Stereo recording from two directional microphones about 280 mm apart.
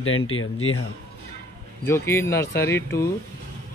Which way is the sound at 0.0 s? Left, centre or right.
Left.